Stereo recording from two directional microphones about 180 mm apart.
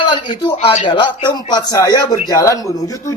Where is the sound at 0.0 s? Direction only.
25° left (ahead or behind).